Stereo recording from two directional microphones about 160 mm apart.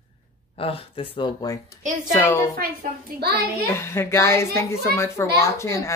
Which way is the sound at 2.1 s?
15° left (ahead or behind).